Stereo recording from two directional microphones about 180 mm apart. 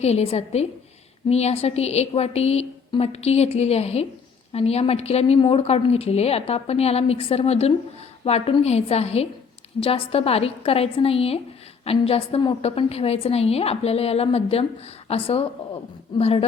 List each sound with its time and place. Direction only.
0.0 s a woman's voice: 35° left (ahead or behind)